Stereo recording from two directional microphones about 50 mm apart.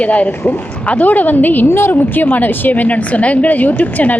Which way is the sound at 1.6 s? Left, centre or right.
Left.